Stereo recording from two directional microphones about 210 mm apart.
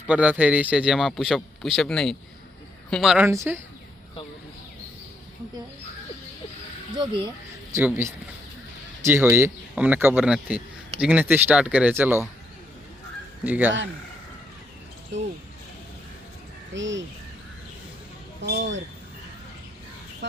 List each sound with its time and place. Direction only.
0.1 s a man's voice: 5° right (ahead or behind)
6.9 s speech: 20° right (ahead or behind)
7.8 s speech: 10° right (ahead or behind)
13.4 s speech: 5° right (ahead or behind)
16.7 s speech: 60° right (ahead or behind)
18.4 s speech: 55° right (ahead or behind)